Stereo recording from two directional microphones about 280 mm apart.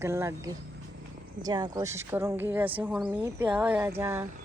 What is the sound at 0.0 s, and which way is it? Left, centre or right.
Speech, centre.